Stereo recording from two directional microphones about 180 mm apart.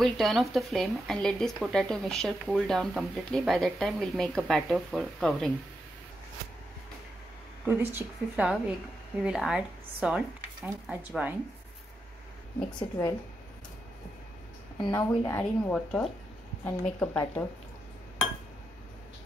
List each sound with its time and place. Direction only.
0.0 s speech: centre (ahead or behind)
7.6 s speech: 10° right (ahead or behind)
12.6 s a woman's voice: 25° left (ahead or behind)
14.9 s a woman's voice: 10° left (ahead or behind)